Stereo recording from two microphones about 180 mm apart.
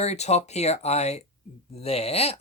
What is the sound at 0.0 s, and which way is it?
Speech, 35° left (ahead or behind).